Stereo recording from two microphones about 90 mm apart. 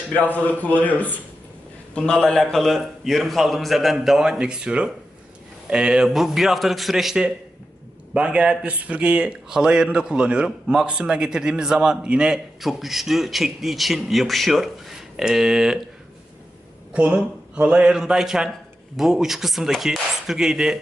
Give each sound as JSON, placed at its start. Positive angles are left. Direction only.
{"t": 0.3, "sound": "a man's voice", "side_deg": 15}
{"t": 16.9, "sound": "a man's voice", "side_deg": -10}